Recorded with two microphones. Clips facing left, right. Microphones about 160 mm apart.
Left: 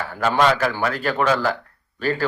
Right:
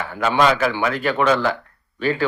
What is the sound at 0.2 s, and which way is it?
Speech, 45° left (ahead or behind).